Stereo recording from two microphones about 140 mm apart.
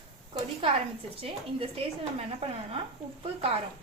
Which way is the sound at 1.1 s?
45° right (ahead or behind).